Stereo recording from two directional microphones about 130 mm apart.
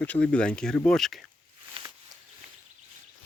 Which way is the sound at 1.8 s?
45° right (ahead or behind).